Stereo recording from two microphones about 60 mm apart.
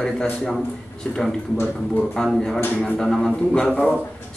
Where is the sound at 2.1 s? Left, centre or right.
Centre.